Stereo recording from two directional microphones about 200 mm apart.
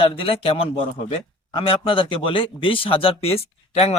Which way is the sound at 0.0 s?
25° left (ahead or behind).